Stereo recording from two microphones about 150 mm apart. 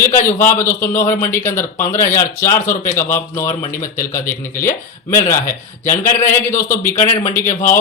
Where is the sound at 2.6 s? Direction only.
60° left (ahead or behind).